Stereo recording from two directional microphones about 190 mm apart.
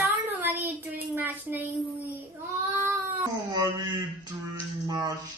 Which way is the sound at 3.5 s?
20° right (ahead or behind).